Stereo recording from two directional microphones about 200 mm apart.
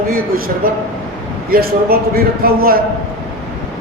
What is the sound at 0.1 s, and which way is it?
A man's voice, 45° right (ahead or behind).